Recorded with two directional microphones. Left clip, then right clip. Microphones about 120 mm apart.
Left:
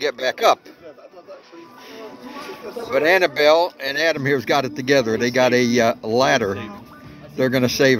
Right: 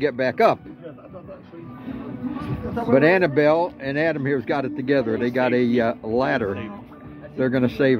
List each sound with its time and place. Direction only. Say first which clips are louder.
0.0 s speech: even; 15° left (ahead or behind)
2.9 s speech: left 1 dB; 15° left (ahead or behind)